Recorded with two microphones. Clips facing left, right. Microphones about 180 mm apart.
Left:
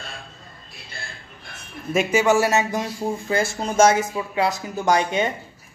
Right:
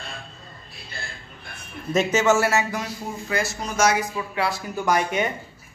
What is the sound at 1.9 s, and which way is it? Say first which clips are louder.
Speech: left 1 dB; 10° left (ahead or behind).